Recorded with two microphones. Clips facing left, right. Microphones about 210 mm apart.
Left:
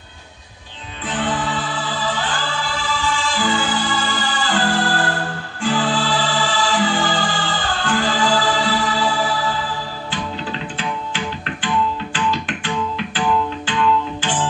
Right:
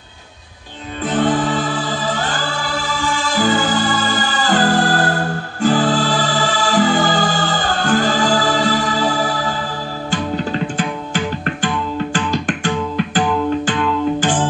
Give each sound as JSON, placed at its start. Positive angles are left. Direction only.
{"t": 1.0, "sound": "music", "side_deg": -45}